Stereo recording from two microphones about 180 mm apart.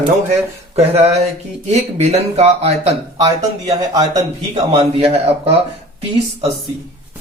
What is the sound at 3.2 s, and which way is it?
A man's voice, 20° right (ahead or behind).